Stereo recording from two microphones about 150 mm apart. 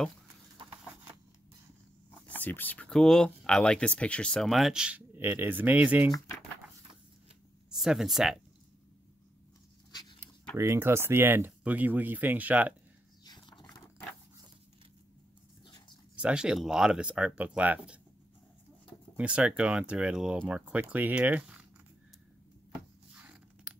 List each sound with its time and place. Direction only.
2.0 s speech: 10° left (ahead or behind); by 6.0 s 10° right (ahead or behind)
7.7 s speech: centre (ahead or behind)
10.6 s speech: 20° right (ahead or behind)
13.2 s a sound: 30° left (ahead or behind)
15.6 s dog: 30° left (ahead or behind)
16.2 s speech: 5° right (ahead or behind)
19.1 s speech: 10° right (ahead or behind)
23.1 s a sound: 10° right (ahead or behind)